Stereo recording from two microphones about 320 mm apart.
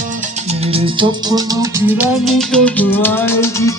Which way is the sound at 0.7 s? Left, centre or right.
Centre.